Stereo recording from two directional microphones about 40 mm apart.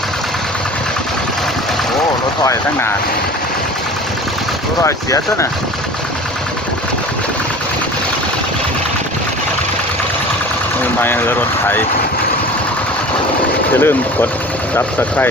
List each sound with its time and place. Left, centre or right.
11.0 s speech: left
13.7 s speech: left